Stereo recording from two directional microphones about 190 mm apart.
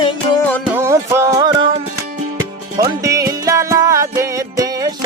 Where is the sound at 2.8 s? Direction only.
15° right (ahead or behind).